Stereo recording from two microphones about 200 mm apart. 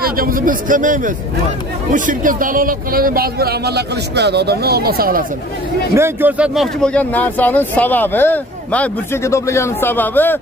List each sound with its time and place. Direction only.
0.0 s a man's voice: 45° right (ahead or behind)
5.9 s speech: 10° right (ahead or behind); by 10.4 s 10° left (ahead or behind)